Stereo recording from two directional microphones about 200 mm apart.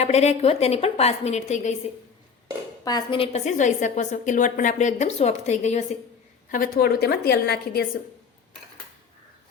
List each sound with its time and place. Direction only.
0.0 s a woman's voice: 35° left (ahead or behind)
2.8 s a woman's voice: 20° left (ahead or behind)
6.5 s a woman's voice: 50° left (ahead or behind)